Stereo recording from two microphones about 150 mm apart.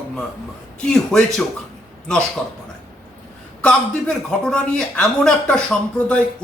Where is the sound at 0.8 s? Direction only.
5° left (ahead or behind).